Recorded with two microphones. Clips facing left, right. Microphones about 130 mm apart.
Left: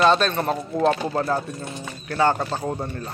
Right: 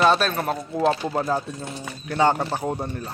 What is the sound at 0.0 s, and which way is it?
Speech, 5° right (ahead or behind).